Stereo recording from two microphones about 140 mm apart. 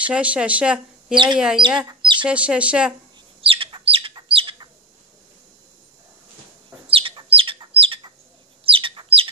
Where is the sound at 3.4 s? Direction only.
40° right (ahead or behind).